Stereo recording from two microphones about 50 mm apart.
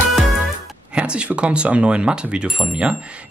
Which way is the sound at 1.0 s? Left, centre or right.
Right.